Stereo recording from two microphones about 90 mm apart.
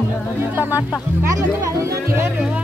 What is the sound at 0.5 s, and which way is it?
Music, 20° right (ahead or behind).